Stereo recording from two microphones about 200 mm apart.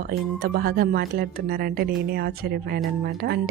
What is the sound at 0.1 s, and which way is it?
A woman's voice, 50° right (ahead or behind).